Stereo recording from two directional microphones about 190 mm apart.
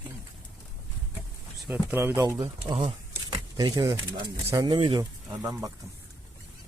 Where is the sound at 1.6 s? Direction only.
5° right (ahead or behind).